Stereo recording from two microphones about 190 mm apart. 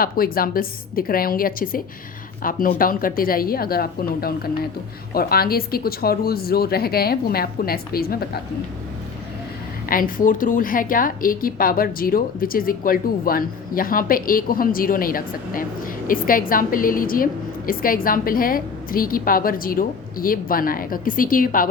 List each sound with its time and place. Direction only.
0.0 s a woman's voice: 50° left (ahead or behind)
9.9 s a woman's voice: 45° left (ahead or behind)